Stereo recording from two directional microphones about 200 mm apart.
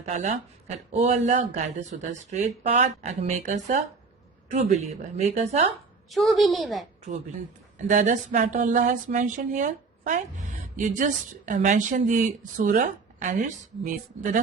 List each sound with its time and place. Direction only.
0.0 s speech: 35° right (ahead or behind)
6.1 s a child's voice: centre (ahead or behind)
7.9 s speech: 40° right (ahead or behind)